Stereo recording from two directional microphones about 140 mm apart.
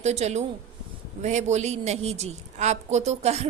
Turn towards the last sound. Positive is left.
turn(degrees=-50)  # may be behind; listen again after turning